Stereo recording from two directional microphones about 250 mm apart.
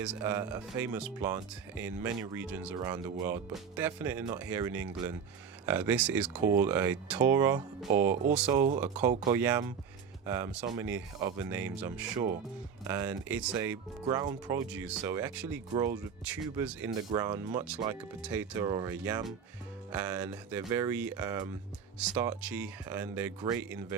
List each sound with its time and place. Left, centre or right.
0.0 s speech: centre